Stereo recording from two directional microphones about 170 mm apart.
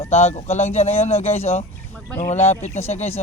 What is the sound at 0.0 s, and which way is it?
Speech, 40° left (ahead or behind).